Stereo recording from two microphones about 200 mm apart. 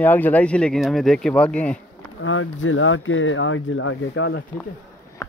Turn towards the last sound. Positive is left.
turn(degrees=80)